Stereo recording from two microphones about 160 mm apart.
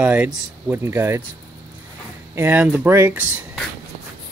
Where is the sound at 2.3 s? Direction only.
10° right (ahead or behind).